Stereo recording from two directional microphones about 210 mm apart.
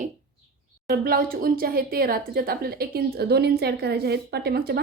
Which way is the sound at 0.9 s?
45° right (ahead or behind).